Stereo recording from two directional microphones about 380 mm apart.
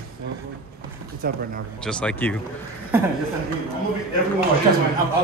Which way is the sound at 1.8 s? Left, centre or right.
Centre.